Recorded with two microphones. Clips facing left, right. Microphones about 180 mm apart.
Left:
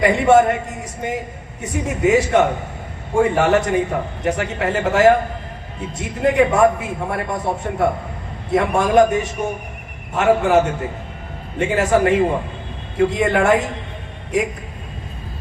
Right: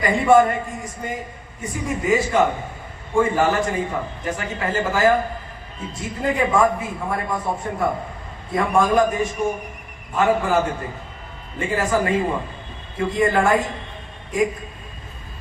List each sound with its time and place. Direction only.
0.0 s a man's voice: 75° left (ahead or behind)
11.6 s a man's voice: 75° left (ahead or behind)